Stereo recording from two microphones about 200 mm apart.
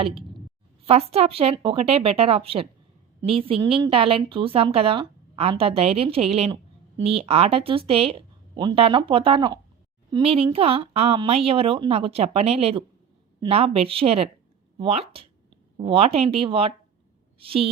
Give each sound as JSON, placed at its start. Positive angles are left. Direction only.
{"t": 0.9, "sound": "a woman's voice", "side_deg": -30}